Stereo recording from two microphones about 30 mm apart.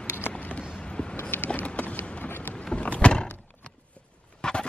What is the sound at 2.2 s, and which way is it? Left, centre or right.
Boat, left.